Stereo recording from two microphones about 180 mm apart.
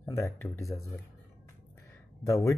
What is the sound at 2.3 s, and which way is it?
Speech, 15° left (ahead or behind).